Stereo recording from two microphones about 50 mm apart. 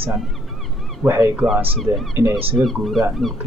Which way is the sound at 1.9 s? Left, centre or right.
Right.